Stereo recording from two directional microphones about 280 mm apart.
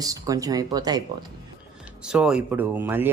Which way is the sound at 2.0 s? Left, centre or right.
Centre.